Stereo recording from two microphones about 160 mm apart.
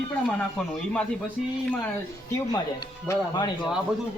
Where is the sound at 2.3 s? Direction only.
25° left (ahead or behind).